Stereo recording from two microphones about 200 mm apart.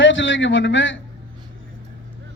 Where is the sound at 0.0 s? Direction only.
70° left (ahead or behind).